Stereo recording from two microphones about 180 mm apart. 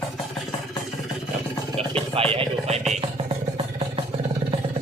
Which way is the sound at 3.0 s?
30° right (ahead or behind).